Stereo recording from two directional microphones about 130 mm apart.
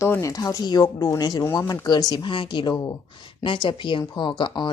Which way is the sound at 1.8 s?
35° left (ahead or behind).